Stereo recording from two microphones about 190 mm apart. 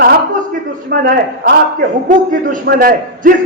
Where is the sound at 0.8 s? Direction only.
55° right (ahead or behind).